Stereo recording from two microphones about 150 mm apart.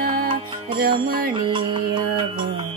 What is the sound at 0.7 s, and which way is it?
Music, 85° right.